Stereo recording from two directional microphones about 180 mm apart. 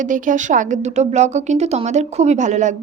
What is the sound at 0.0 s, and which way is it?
A woman's voice, 45° right (ahead or behind).